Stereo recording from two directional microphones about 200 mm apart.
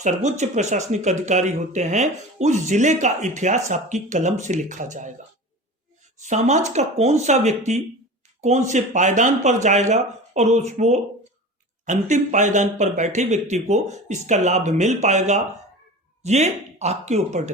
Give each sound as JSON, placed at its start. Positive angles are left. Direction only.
{"t": 0.0, "sound": "speech", "side_deg": -35}
{"t": 6.1, "sound": "speech", "side_deg": -35}